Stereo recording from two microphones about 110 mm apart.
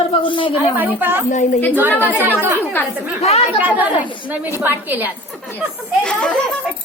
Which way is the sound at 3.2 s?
70° left (ahead or behind).